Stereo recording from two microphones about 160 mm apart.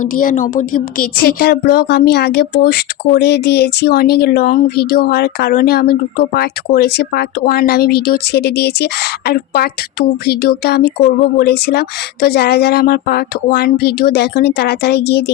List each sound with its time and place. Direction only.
0.0 s a woman's voice: 60° left (ahead or behind); by 15.2 s 90° left